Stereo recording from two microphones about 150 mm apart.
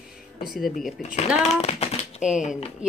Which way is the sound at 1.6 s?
45° left (ahead or behind).